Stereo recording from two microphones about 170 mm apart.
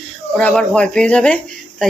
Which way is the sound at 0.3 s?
5° left (ahead or behind).